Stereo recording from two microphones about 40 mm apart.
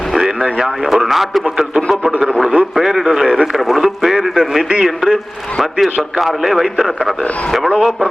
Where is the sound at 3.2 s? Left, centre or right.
Right.